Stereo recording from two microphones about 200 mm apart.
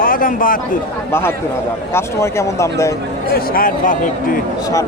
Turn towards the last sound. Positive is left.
turn(degrees=40)  # may be behind; listen again after turning